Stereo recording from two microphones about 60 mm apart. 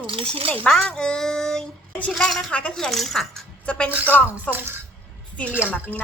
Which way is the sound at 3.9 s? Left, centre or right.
Right.